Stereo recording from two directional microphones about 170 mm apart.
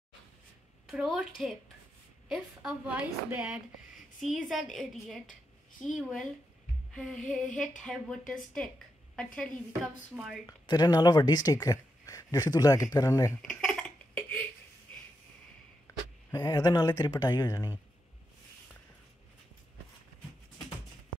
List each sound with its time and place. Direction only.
0.8 s a woman's voice: centre (ahead or behind)
2.2 s a woman's voice: centre (ahead or behind)
10.1 s a woman's voice: 5° right (ahead or behind)
10.4 s speech: 25° left (ahead or behind)
13.4 s a sound: 5° left (ahead or behind)
15.9 s a sound: 20° left (ahead or behind)
16.3 s speech: 20° left (ahead or behind)